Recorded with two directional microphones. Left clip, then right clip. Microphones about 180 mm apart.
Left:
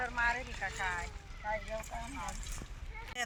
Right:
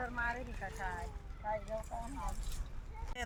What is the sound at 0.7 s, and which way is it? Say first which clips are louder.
Speech: left 6 dB; 10° right (ahead or behind).